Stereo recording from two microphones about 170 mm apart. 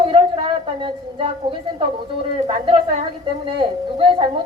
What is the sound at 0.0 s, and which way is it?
A woman's voice, 30° right (ahead or behind).